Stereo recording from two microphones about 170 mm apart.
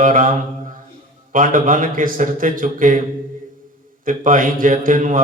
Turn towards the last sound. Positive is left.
turn(degrees=-50)  # may be behind; listen again after turning